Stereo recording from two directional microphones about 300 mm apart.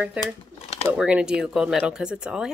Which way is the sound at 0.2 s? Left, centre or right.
Centre.